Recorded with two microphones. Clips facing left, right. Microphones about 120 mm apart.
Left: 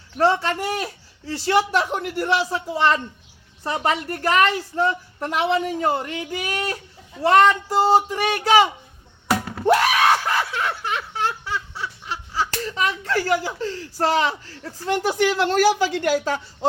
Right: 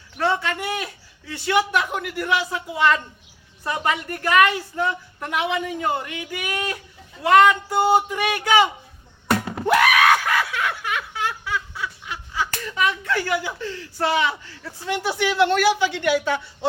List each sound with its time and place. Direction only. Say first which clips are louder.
0.2 s a woman's voice: left 3 dB; 35° left (ahead or behind)
9.6 s screaming: even; 30° left (ahead or behind)
15.2 s a woman's voice: even; 40° left (ahead or behind)